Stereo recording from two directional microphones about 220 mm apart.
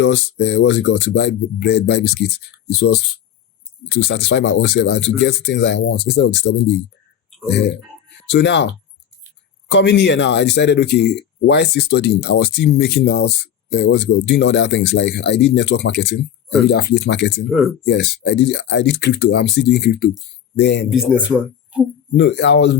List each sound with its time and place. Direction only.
0.0 s speech: 55° left (ahead or behind)
20.9 s speech: 5° right (ahead or behind)
22.2 s speech: 50° left (ahead or behind)